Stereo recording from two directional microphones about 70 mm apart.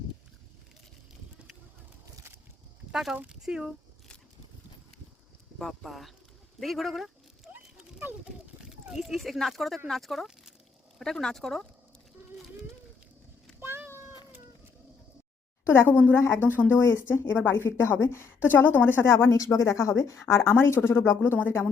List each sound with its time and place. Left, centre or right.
2.9 s speech: centre
5.5 s speech: centre
6.6 s dog: centre
8.6 s speech: centre
13.6 s a sound: right
15.6 s speech: left
16.1 s a woman's voice: left